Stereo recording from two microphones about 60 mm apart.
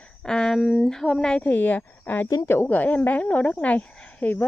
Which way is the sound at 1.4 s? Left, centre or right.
Left.